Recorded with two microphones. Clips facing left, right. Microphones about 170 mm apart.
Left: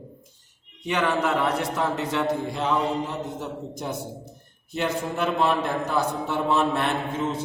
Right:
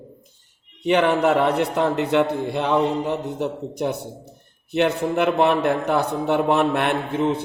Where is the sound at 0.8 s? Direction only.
60° right (ahead or behind).